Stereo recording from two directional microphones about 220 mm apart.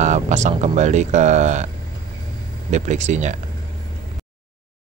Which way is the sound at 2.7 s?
30° right (ahead or behind).